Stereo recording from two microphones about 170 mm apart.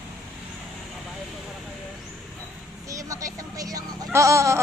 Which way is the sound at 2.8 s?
20° right (ahead or behind).